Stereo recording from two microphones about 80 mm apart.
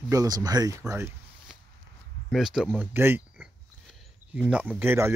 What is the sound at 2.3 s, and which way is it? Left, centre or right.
Speech, centre.